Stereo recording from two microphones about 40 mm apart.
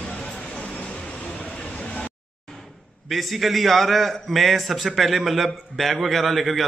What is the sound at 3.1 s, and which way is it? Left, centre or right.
A man's voice, centre.